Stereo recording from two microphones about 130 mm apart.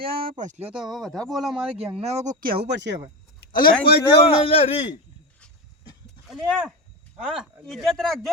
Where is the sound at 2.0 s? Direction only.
60° right (ahead or behind).